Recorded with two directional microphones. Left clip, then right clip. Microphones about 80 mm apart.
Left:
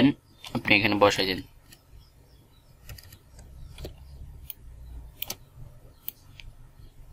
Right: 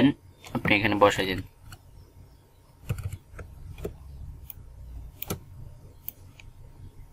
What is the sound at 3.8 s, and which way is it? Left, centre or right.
Vehicle, left.